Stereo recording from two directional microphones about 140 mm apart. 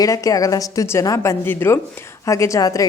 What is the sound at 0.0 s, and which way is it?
A woman's voice, 25° left (ahead or behind).